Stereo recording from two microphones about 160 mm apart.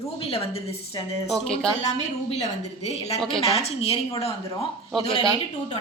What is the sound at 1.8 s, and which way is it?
Speech, 40° left (ahead or behind).